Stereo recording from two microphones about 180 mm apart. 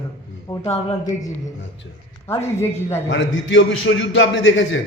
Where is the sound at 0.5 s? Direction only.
20° left (ahead or behind).